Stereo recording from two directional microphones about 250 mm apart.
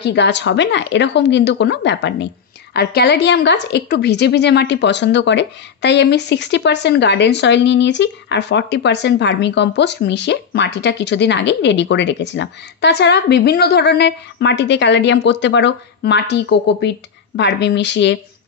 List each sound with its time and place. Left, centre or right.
0.0 s a woman's voice: left